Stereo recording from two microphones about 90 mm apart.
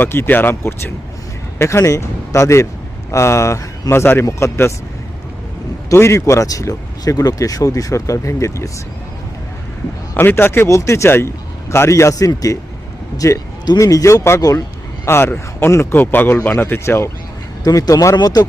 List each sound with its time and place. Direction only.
0.0 s a man's voice: 25° left (ahead or behind)
5.9 s speech: 30° left (ahead or behind)
10.2 s a man's voice: 25° left (ahead or behind)
17.6 s speech: 45° left (ahead or behind)